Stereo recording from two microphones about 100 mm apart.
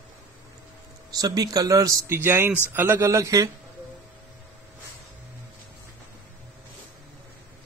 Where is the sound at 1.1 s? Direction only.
40° right (ahead or behind).